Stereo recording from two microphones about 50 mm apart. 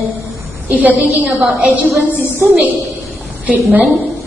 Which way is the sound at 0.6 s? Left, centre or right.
Right.